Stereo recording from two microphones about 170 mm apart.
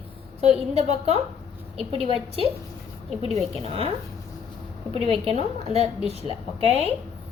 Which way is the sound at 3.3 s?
35° right (ahead or behind).